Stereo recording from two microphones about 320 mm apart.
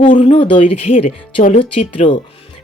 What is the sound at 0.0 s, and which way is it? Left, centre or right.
Speech, centre.